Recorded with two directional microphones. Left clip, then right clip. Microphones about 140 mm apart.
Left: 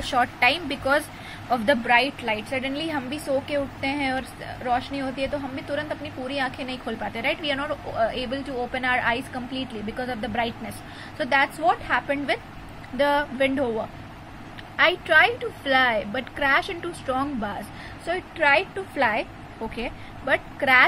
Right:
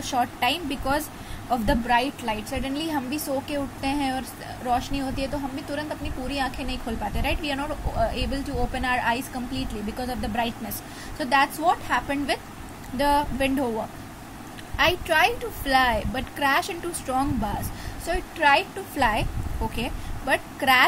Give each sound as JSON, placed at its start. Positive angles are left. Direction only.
{"t": 0.0, "sound": "a woman's voice", "side_deg": 0}